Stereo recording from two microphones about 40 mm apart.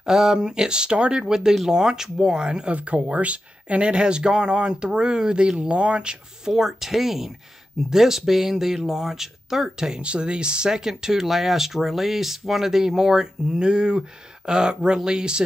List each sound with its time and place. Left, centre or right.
0.0 s speech: centre
1.2 s speech: centre
2.7 s speech: right
6.5 s speech: centre
10.0 s speech: right